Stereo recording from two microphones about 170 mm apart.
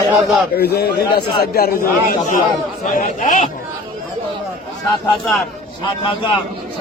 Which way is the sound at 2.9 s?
50° left (ahead or behind).